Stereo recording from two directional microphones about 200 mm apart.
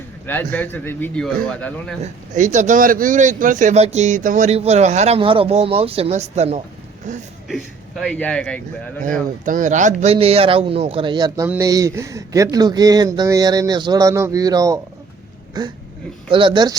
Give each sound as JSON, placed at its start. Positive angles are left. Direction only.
{"t": 0.3, "sound": "a man's voice", "side_deg": 10}
{"t": 2.0, "sound": "speech", "side_deg": -35}
{"t": 7.4, "sound": "speech", "side_deg": 0}
{"t": 9.4, "sound": "speech", "side_deg": -40}